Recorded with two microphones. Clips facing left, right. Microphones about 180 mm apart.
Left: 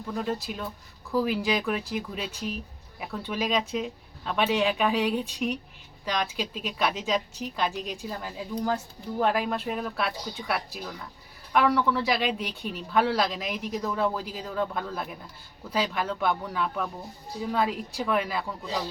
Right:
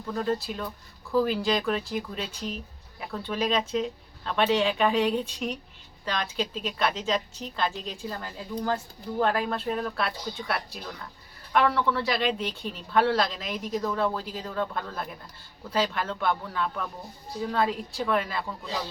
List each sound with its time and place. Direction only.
0.1 s speech: 5° left (ahead or behind)